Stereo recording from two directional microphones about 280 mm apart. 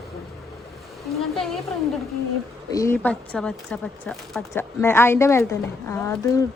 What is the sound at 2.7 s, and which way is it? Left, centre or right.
Speech, centre.